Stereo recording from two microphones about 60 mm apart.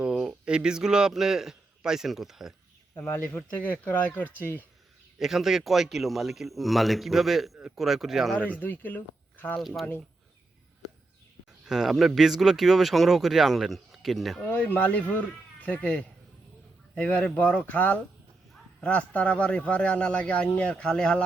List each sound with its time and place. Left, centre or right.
0.0 s a sound: centre
0.4 s a man's voice: centre
3.0 s speech: left
5.2 s speech: centre
8.4 s speech: left
9.6 s speech: centre
11.6 s speech: centre
14.4 s speech: left; by 21.2 s centre